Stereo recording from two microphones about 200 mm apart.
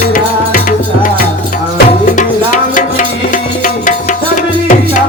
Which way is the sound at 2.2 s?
40° left (ahead or behind).